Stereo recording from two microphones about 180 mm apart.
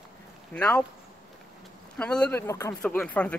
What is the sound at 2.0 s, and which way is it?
Speech, 5° left (ahead or behind).